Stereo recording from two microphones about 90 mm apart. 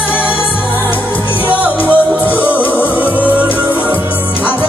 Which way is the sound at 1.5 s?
15° right (ahead or behind).